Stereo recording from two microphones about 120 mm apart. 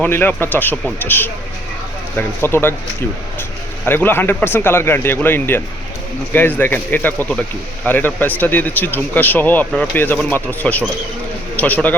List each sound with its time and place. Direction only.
0.0 s speech: 15° left (ahead or behind)
3.8 s speech: 15° left (ahead or behind)